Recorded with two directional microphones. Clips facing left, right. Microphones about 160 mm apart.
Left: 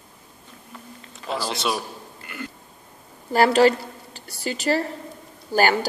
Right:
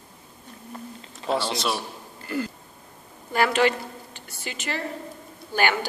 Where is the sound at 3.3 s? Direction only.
35° left (ahead or behind).